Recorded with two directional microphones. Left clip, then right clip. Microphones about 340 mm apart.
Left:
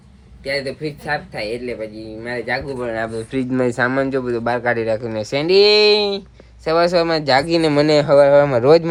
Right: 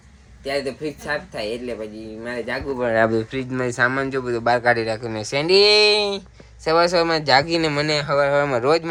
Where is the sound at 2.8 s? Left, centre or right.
Right.